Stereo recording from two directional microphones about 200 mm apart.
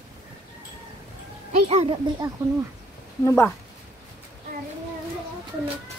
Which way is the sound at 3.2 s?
10° left (ahead or behind).